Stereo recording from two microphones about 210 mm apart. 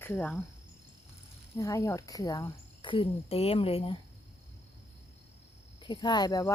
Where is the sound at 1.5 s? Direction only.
15° left (ahead or behind).